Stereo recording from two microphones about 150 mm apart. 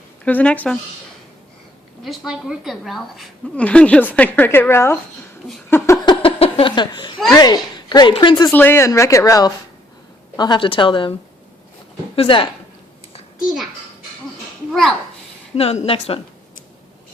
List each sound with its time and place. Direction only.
0.3 s a woman's voice: 10° left (ahead or behind)
2.0 s a woman's voice: 5° right (ahead or behind); by 4.9 s 15° left (ahead or behind)
5.7 s a sound: 20° left (ahead or behind)
6.2 s a sound: 35° left (ahead or behind)
7.3 s a woman's voice: 25° left (ahead or behind)
8.5 s a woman's voice: 15° left (ahead or behind); by 11.1 s 35° left (ahead or behind)
12.1 s a woman's voice: 35° left (ahead or behind)
14.7 s a child's voice: centre (ahead or behind)
15.5 s a woman's voice: 45° left (ahead or behind)